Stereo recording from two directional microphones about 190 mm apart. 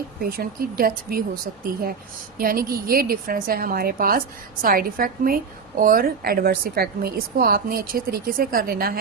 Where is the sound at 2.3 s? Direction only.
50° right (ahead or behind).